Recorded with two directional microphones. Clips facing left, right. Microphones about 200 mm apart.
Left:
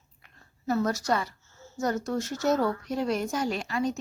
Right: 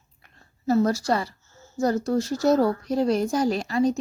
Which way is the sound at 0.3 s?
30° right (ahead or behind).